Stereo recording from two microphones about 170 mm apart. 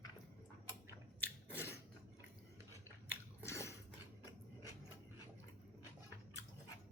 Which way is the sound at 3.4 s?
15° left (ahead or behind).